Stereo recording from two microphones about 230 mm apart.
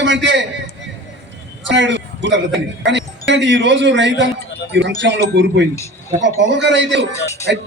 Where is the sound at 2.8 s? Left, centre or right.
Right.